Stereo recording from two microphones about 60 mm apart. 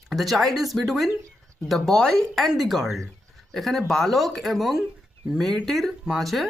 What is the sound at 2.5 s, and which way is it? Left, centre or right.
Speech, centre.